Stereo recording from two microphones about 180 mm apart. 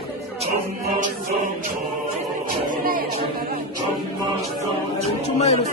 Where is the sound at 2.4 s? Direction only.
50° right (ahead or behind).